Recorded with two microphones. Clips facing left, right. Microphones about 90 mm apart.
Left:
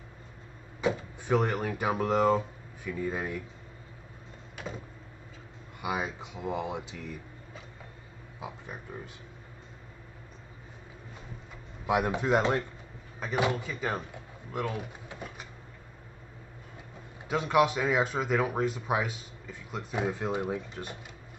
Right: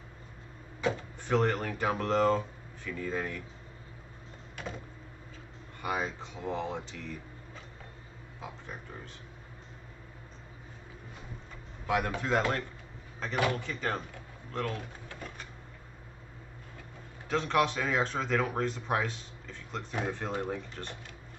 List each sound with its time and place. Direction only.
0.7 s speech: 10° left (ahead or behind)
4.6 s a sound: 5° left (ahead or behind)
5.8 s speech: 10° left (ahead or behind)
8.4 s speech: 10° left (ahead or behind)
11.8 s speech: 15° left (ahead or behind)
17.3 s speech: 10° left (ahead or behind)